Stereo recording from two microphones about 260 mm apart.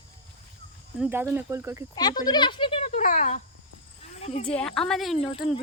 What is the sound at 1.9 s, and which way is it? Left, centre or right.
Speech, centre.